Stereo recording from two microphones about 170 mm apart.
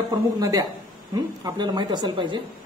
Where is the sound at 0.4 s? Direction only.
20° right (ahead or behind).